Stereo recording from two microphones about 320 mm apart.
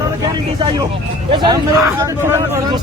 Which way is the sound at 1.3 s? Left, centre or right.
Centre.